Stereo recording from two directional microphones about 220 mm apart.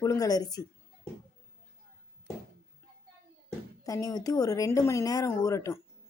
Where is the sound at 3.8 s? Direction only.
15° left (ahead or behind).